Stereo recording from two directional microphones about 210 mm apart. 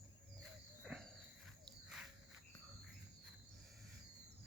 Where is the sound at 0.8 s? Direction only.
Centre (ahead or behind).